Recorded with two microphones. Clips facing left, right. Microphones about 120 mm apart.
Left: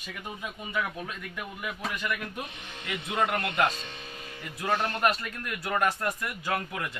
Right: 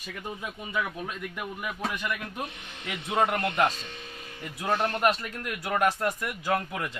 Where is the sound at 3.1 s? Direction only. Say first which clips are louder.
Right 2 dB; 30° right (ahead or behind).